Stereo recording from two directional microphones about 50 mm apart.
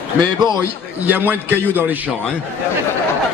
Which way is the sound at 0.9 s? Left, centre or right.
Right.